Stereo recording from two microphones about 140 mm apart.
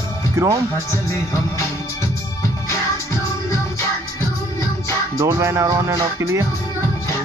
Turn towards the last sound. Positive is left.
turn(degrees=-25)  # may be behind; listen again after turning